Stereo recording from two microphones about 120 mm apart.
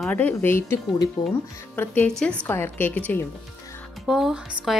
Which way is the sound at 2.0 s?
10° left (ahead or behind).